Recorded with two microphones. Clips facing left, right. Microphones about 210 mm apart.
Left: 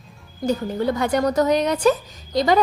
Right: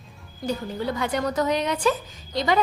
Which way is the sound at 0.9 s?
45° left (ahead or behind).